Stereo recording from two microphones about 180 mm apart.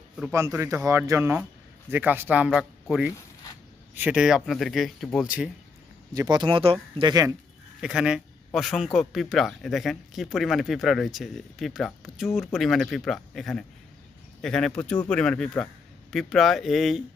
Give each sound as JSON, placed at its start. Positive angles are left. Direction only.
{"t": 0.3, "sound": "speech", "side_deg": -15}
{"t": 2.5, "sound": "a man's voice", "side_deg": 0}
{"t": 6.1, "sound": "speech", "side_deg": -25}
{"t": 7.8, "sound": "a man's voice", "side_deg": -5}